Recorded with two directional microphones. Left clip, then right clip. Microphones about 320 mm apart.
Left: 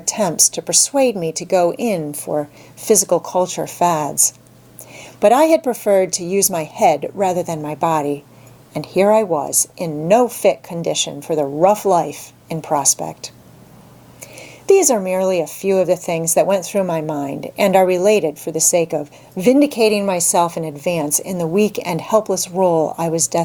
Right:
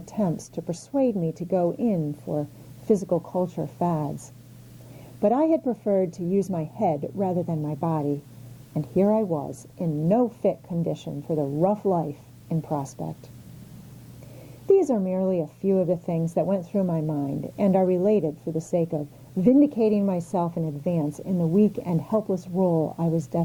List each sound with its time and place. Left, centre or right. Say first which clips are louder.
0.0 s a woman's voice: left 12 dB; centre
2.0 s a woman's voice: left 8 dB; centre
2.9 s a woman's voice: left 9 dB; centre
3.2 s speech: left 9 dB; centre
3.5 s a woman's voice: left 11 dB; centre
5.2 s a woman's voice: left 10 dB; centre
9.7 s a woman's voice: left 7 dB; left
10.1 s a woman's voice: left 10 dB; centre
14.7 s a woman's voice: left 7 dB; centre; by 23.0 s left
23.0 s a woman's voice: left 9 dB; centre